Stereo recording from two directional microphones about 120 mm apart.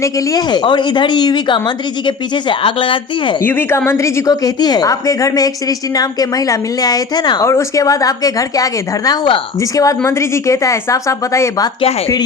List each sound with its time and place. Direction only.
0.0 s a woman's voice: 30° left (ahead or behind)
3.4 s a woman's voice: 20° left (ahead or behind); by 7.4 s 35° left (ahead or behind)
7.4 s a woman's voice: 25° left (ahead or behind)